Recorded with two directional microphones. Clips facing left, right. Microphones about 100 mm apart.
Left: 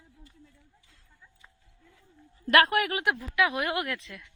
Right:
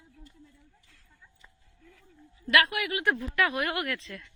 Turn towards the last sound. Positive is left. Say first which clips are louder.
# right 1 dB
turn(degrees=15)  # may be behind; listen again after turning